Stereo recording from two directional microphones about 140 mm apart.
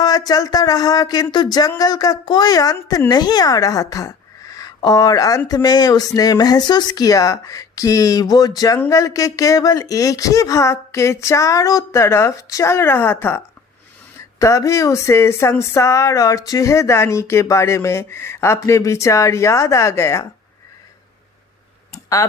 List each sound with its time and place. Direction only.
0.0 s a woman's voice: 25° left (ahead or behind)
21.9 s clicking: 25° left (ahead or behind)